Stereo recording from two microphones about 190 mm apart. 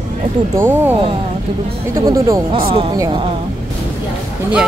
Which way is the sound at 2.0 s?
15° right (ahead or behind).